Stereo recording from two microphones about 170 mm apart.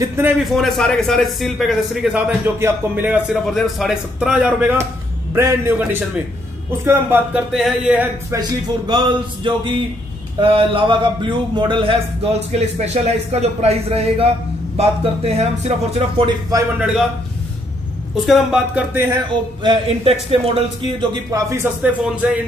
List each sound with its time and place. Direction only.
0.4 s a man's voice: centre (ahead or behind)
3.4 s a man's voice: centre (ahead or behind)
8.3 s speech: 25° right (ahead or behind)
12.5 s speech: 40° right (ahead or behind); by 16.6 s 25° right (ahead or behind)
18.1 s a man's voice: centre (ahead or behind)
19.6 s speech: 30° right (ahead or behind)
22.0 s a man's voice: 5° right (ahead or behind)